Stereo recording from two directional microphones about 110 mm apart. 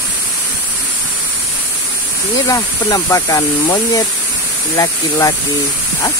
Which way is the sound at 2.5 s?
35° left (ahead or behind).